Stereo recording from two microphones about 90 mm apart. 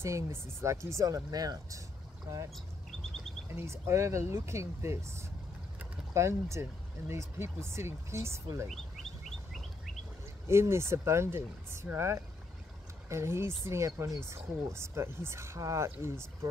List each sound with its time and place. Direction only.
0.0 s speech: 30° right (ahead or behind)
6.1 s speech: 30° right (ahead or behind)
8.6 s speech: centre (ahead or behind)
9.5 s bird: centre (ahead or behind)
10.4 s speech: 30° right (ahead or behind)